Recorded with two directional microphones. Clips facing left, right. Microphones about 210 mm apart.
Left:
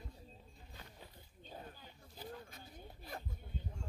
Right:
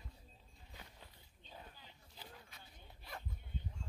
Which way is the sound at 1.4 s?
45° left (ahead or behind).